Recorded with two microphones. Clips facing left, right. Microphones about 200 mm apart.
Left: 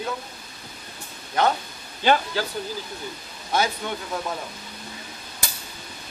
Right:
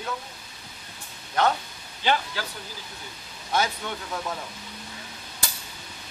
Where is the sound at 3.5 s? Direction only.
10° left (ahead or behind).